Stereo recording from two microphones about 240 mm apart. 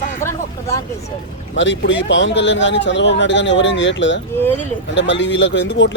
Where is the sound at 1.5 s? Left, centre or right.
Left.